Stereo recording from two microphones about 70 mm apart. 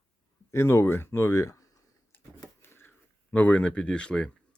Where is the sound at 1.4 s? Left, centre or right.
Left.